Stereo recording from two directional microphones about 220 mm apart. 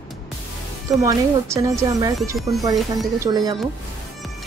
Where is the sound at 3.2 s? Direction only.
15° right (ahead or behind).